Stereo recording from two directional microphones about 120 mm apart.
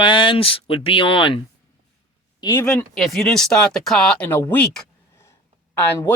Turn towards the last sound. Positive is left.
turn(degrees=15)  # may be behind; listen again after turning